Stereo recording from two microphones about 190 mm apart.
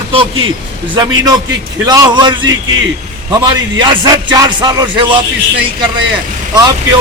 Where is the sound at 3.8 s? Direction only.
20° right (ahead or behind).